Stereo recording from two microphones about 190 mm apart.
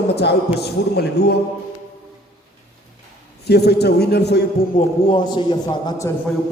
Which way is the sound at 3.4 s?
60° left (ahead or behind).